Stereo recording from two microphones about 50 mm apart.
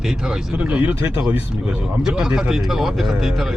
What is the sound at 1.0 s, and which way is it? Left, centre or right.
Speech, right.